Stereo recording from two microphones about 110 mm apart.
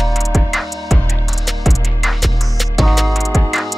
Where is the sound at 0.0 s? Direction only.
Centre (ahead or behind).